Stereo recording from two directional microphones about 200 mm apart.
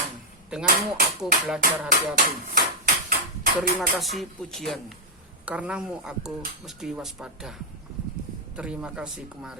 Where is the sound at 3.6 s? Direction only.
Centre (ahead or behind).